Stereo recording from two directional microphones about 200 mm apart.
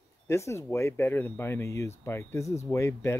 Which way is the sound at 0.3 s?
15° left (ahead or behind).